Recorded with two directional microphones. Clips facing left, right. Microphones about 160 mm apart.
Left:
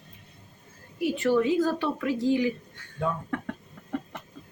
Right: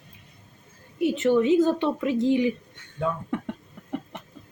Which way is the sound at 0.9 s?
20° right (ahead or behind).